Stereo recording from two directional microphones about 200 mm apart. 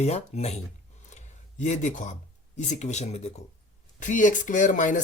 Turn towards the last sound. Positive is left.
turn(degrees=40)  # may be behind; listen again after turning